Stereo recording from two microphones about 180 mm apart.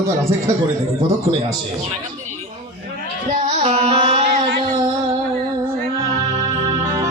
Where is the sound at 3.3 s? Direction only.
35° right (ahead or behind).